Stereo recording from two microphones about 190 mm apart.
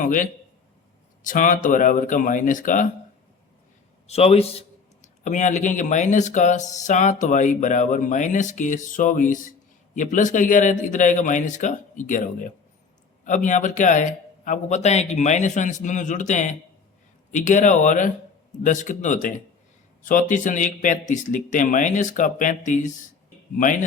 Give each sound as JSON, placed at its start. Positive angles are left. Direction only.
{"t": 0.0, "sound": "speech", "side_deg": 45}
{"t": 4.0, "sound": "speech", "side_deg": 35}